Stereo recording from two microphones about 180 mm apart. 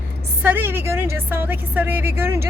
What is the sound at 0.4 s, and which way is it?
A woman's voice, 10° right (ahead or behind).